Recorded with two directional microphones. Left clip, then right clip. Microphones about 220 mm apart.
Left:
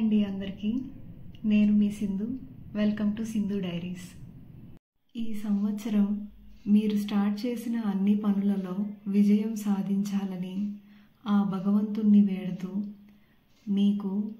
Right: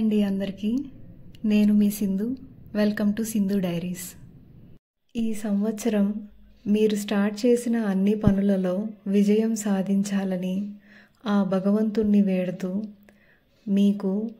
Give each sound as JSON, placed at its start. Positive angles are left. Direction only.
{"t": 0.1, "sound": "a woman's voice", "side_deg": -50}
{"t": 5.1, "sound": "a woman's voice", "side_deg": -50}
{"t": 13.7, "sound": "a woman's voice", "side_deg": -45}